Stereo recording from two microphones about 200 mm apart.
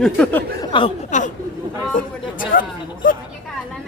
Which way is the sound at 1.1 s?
35° left (ahead or behind).